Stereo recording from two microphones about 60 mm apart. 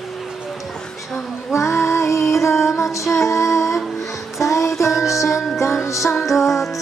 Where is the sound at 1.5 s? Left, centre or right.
Left.